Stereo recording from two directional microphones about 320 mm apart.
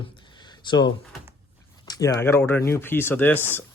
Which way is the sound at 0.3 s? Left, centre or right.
Centre.